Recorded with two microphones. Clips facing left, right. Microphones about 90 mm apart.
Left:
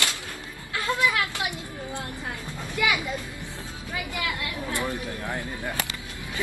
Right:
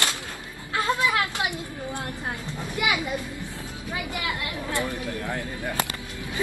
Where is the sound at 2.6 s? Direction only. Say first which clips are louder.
Left 1 dB; 20° right (ahead or behind).